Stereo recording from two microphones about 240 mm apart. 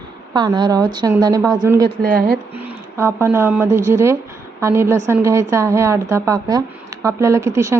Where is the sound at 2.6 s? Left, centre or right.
Centre.